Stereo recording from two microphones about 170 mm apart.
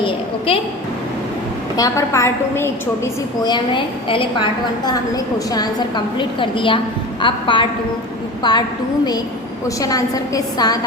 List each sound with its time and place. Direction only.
0.0 s a woman's voice: 35° left (ahead or behind)
1.7 s a woman's voice: 20° left (ahead or behind)
9.6 s a woman's voice: 20° left (ahead or behind)